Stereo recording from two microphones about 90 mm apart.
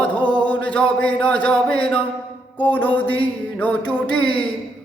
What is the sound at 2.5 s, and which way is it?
Mantra, 20° left (ahead or behind).